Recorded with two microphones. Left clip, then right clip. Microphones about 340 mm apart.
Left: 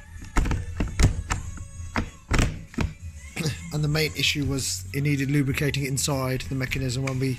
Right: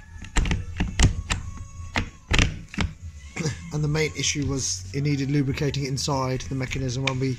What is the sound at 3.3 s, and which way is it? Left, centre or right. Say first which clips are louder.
Speech: even; centre.